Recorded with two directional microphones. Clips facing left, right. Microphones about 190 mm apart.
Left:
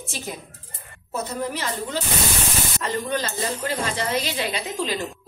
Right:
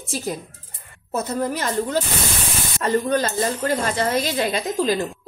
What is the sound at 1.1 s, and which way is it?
Speech, 45° right (ahead or behind).